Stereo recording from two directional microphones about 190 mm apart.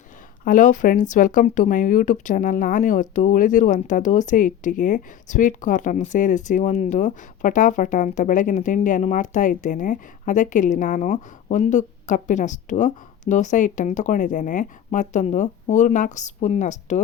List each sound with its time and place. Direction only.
0.4 s speech: 45° left (ahead or behind)